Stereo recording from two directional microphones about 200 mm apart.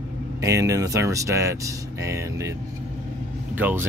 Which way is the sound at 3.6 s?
10° right (ahead or behind).